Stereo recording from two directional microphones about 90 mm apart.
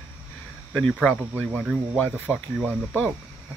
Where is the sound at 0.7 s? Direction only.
10° left (ahead or behind).